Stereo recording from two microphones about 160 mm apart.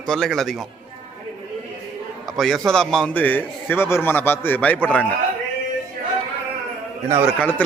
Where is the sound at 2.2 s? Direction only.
Centre (ahead or behind).